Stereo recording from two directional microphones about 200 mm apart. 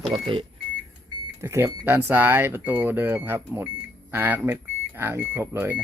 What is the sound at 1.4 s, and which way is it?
Speech, 10° right (ahead or behind).